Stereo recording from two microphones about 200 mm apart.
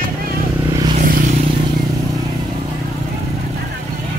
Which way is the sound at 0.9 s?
45° right (ahead or behind).